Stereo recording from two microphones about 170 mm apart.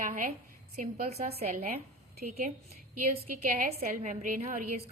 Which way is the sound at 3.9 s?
50° right (ahead or behind).